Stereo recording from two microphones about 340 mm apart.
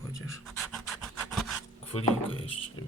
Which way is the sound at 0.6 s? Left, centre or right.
Centre.